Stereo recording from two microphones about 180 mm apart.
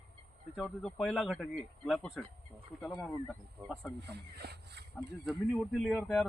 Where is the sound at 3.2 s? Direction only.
10° left (ahead or behind).